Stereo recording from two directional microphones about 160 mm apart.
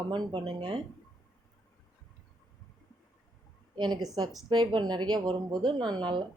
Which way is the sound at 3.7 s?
25° right (ahead or behind).